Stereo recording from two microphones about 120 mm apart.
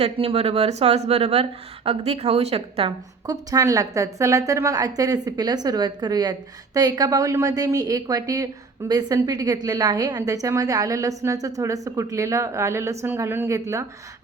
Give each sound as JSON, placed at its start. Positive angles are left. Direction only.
{"t": 0.0, "sound": "speech", "side_deg": -55}
{"t": 3.2, "sound": "a woman's voice", "side_deg": -30}